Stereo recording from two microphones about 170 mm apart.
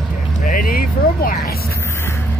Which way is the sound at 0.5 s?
55° left (ahead or behind).